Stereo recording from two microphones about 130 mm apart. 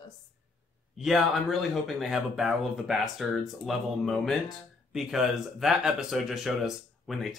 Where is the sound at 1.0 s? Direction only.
Centre (ahead or behind).